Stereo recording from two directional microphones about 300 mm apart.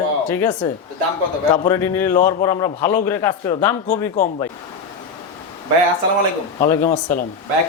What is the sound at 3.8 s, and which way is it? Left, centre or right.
Speech, left.